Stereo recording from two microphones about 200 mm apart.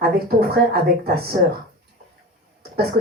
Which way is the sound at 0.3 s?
50° right (ahead or behind).